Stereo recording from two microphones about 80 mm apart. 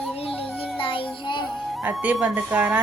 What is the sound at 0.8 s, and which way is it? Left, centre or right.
Child singing, left.